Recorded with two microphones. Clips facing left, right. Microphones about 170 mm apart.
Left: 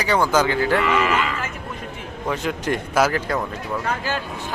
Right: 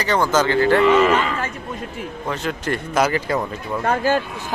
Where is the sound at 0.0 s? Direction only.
10° left (ahead or behind).